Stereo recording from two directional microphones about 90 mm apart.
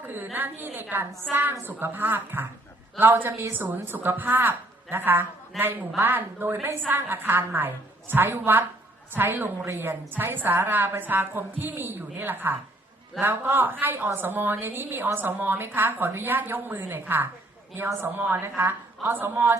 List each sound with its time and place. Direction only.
0.0 s a woman's voice: 20° right (ahead or behind)